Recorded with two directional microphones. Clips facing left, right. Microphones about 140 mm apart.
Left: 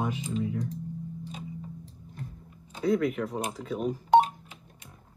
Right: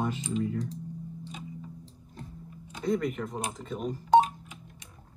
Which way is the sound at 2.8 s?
Centre (ahead or behind).